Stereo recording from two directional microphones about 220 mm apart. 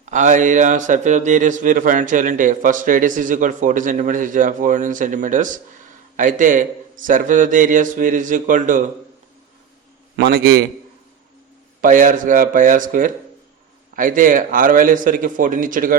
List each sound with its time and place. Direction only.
0.0 s a man's voice: 35° right (ahead or behind)
10.2 s a man's voice: 45° right (ahead or behind)
11.8 s a man's voice: 35° right (ahead or behind)